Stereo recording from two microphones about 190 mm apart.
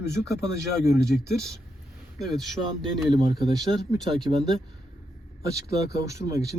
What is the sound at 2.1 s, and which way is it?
Speech, centre (ahead or behind).